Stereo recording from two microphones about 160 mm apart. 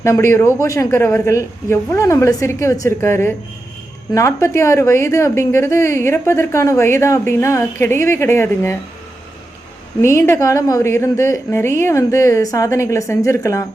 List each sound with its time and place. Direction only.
0.0 s a woman's voice: 20° left (ahead or behind)
10.0 s a woman's voice: 20° left (ahead or behind)